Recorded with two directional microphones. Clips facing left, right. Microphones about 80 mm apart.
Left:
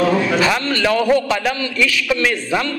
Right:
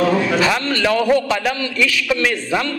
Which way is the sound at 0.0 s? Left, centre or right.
Left.